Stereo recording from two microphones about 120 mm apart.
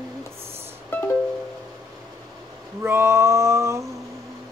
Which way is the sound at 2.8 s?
20° right (ahead or behind).